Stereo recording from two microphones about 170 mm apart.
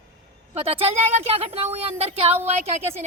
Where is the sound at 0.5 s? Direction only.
35° right (ahead or behind).